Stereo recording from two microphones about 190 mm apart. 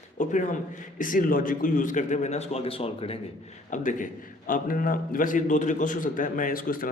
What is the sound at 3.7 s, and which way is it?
A man's voice, 45° left (ahead or behind).